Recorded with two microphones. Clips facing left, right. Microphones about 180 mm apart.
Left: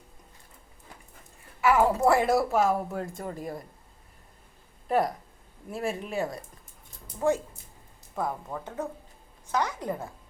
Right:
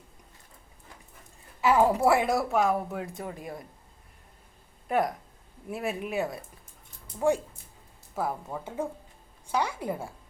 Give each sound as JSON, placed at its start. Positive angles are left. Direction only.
{"t": 1.6, "sound": "speech", "side_deg": -20}
{"t": 2.0, "sound": "speech", "side_deg": 0}
{"t": 4.9, "sound": "speech", "side_deg": 0}
{"t": 7.2, "sound": "speech", "side_deg": -15}